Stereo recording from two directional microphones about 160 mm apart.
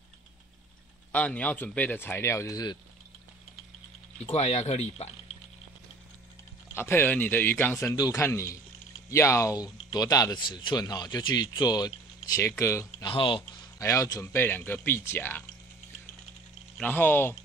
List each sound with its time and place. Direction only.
1.1 s a man's voice: 10° left (ahead or behind); by 2.8 s 25° left (ahead or behind)
4.3 s speech: 40° left (ahead or behind)
6.7 s a man's voice: 15° left (ahead or behind)
13.1 s speech: 35° left (ahead or behind)
13.7 s a man's voice: 20° left (ahead or behind)
16.7 s a man's voice: 10° left (ahead or behind)